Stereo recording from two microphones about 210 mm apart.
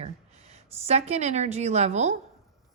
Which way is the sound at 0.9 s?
30° right (ahead or behind).